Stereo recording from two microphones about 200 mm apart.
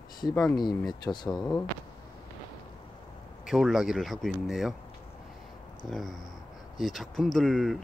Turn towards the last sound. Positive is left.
turn(degrees=0)  # may be behind; listen again after turning